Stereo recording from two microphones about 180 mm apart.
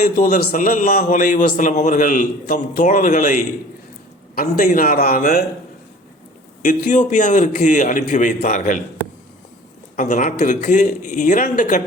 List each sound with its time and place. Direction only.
0.0 s a man's voice: 45° left (ahead or behind)
6.6 s a man's voice: 45° left (ahead or behind)
9.9 s a man's voice: 45° left (ahead or behind)